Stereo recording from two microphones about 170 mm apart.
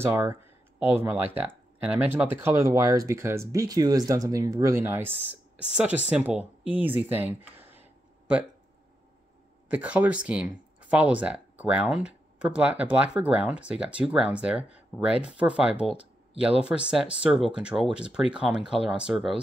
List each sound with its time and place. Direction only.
0.0 s speech: 15° right (ahead or behind)
9.7 s speech: 10° right (ahead or behind)